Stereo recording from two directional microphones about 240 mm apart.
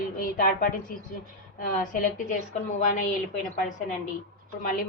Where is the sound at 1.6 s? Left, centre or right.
Left.